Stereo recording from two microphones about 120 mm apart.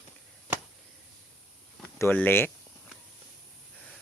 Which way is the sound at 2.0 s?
15° left (ahead or behind).